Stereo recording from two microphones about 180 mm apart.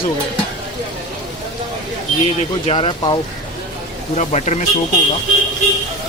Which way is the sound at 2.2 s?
35° left (ahead or behind).